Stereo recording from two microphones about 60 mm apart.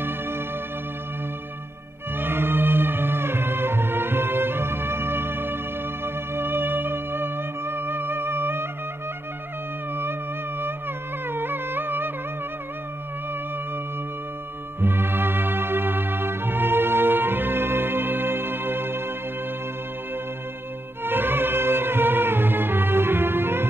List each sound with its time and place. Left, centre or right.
2.1 s music: right
11.2 s music: right
14.8 s music: right
21.0 s music: right